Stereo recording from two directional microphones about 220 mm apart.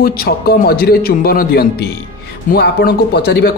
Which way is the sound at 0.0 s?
45° left (ahead or behind).